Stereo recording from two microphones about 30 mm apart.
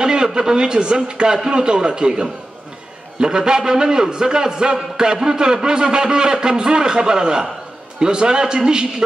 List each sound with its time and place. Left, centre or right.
0.0 s a man's voice: right